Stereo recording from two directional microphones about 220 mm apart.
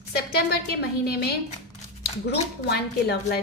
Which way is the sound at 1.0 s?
45° left (ahead or behind).